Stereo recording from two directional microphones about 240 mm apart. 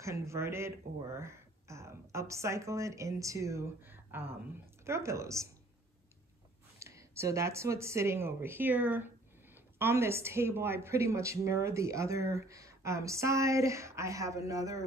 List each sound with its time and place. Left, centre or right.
0.0 s speech: centre
6.8 s speech: centre